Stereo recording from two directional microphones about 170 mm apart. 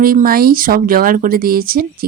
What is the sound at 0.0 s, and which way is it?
Speech, 60° right (ahead or behind).